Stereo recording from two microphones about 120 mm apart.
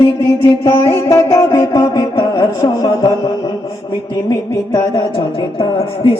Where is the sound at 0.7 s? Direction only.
20° left (ahead or behind).